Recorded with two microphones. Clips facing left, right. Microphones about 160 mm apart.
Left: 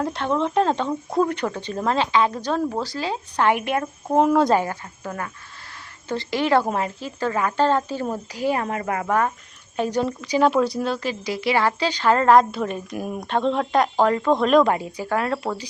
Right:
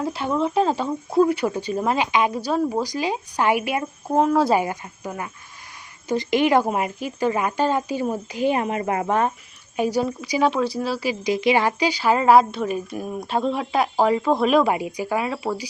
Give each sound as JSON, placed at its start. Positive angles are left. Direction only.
{"t": 0.0, "sound": "speech", "side_deg": -5}
{"t": 9.7, "sound": "speech", "side_deg": -10}
{"t": 10.5, "sound": "speech", "side_deg": 0}